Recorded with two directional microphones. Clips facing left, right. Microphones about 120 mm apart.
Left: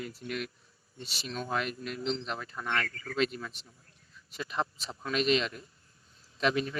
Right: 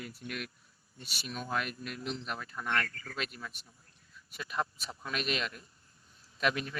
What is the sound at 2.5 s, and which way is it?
Speech, 10° left (ahead or behind).